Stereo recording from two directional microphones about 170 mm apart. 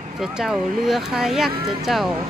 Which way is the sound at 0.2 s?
5° right (ahead or behind).